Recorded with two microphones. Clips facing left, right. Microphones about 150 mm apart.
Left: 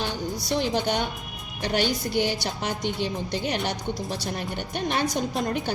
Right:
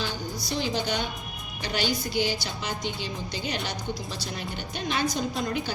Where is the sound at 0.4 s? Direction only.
60° left (ahead or behind).